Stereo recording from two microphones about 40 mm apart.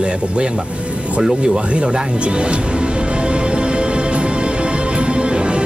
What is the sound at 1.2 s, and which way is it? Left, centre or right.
Music, right.